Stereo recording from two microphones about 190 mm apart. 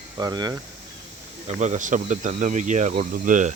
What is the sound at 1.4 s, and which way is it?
Speech, 40° right (ahead or behind).